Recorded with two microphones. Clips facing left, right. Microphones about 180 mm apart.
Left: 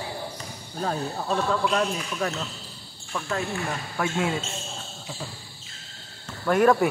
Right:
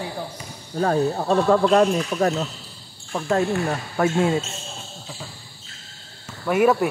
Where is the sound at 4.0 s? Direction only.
40° right (ahead or behind).